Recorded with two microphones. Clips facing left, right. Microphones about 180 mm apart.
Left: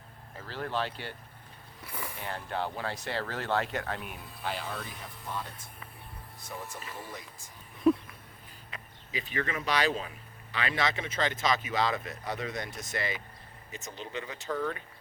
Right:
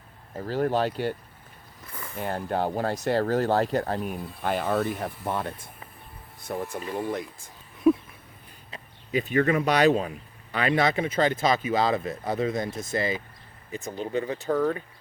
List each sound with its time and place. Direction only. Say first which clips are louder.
0.3 s speech: right 9 dB; 45° right (ahead or behind)
1.8 s vehicle: left 1 dB; 10° left (ahead or behind)
2.1 s speech: right 9 dB; 45° right (ahead or behind); by 7.5 s 60° right (ahead or behind)
7.9 s a sound: right 4 dB; 5° right (ahead or behind)
9.1 s speech: right 11 dB; 45° right (ahead or behind)
13.8 s speech: right 11 dB; 45° right (ahead or behind)